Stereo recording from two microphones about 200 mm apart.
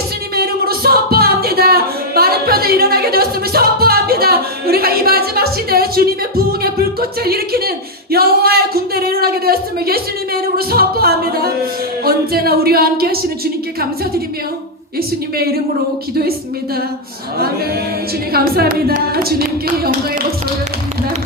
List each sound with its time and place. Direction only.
0.3 s music: 50° right (ahead or behind)
7.3 s speech: 50° right (ahead or behind)
18.3 s speech: 50° right (ahead or behind)